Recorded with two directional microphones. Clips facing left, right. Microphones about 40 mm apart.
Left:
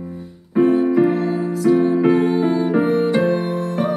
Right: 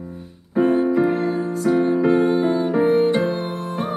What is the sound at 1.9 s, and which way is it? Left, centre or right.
Music, left.